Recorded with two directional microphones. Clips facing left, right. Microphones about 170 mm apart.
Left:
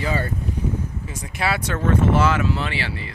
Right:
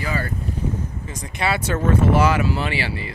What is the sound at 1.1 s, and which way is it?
Speech, 5° left (ahead or behind).